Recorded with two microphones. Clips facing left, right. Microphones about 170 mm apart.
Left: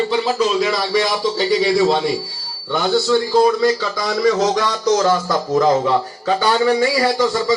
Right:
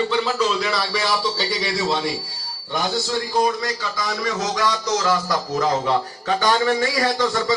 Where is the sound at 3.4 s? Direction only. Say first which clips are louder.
Left 7 dB; 30° left (ahead or behind).